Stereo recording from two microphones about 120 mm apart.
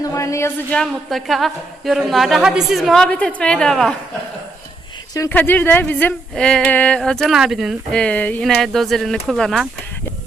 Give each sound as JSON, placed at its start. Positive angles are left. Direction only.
{"t": 0.0, "sound": "a sound", "side_deg": 25}
{"t": 0.7, "sound": "a woman's voice", "side_deg": 5}
{"t": 5.3, "sound": "a woman's voice", "side_deg": 15}
{"t": 7.9, "sound": "a woman's voice", "side_deg": 10}